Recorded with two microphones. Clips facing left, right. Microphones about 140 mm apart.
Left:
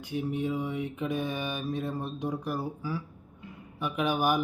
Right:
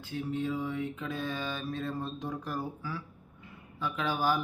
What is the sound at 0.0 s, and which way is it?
A man's voice, 15° left (ahead or behind).